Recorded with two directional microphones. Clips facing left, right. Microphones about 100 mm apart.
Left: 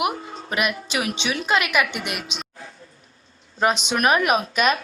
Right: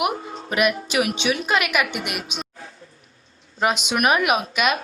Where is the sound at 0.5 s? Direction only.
25° left (ahead or behind).